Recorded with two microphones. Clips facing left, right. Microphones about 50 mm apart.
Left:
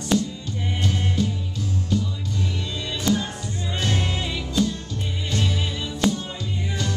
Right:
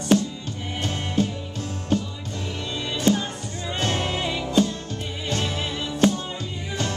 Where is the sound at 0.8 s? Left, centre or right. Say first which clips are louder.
Right 1 dB; right.